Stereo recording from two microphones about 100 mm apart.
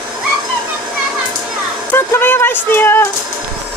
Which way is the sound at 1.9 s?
20° left (ahead or behind).